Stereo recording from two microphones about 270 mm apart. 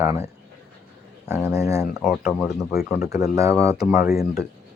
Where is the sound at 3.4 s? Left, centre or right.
Centre.